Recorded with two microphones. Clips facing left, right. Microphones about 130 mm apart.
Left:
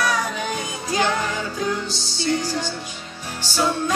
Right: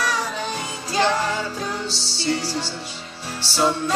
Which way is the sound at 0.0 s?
30° right (ahead or behind).